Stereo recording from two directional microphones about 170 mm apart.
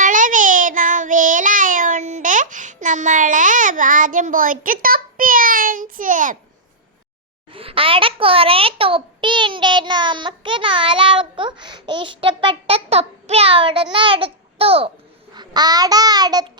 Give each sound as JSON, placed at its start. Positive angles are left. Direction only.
{"t": 0.0, "sound": "child singing", "side_deg": -50}
{"t": 7.5, "sound": "a child's voice", "side_deg": -35}
{"t": 13.9, "sound": "babbling", "side_deg": -30}
{"t": 15.4, "sound": "babbling", "side_deg": -25}